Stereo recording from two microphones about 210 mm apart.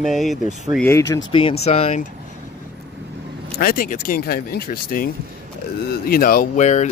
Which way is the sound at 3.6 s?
45° left (ahead or behind).